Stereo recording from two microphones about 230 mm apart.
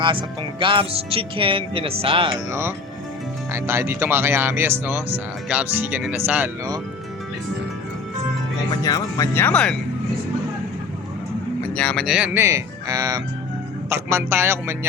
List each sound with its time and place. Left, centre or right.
0.0 s speech: right
2.5 s speech: centre
8.8 s speech: centre
11.8 s speech: centre